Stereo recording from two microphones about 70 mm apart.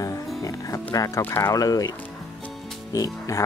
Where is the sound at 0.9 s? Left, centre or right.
Left.